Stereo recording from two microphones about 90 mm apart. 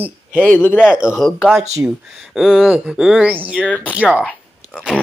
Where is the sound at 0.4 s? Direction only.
20° left (ahead or behind).